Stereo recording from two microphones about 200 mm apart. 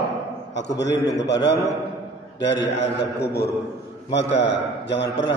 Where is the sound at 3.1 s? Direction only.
55° left (ahead or behind).